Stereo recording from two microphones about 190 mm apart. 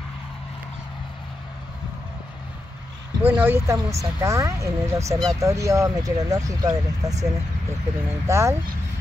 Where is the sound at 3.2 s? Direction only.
10° right (ahead or behind).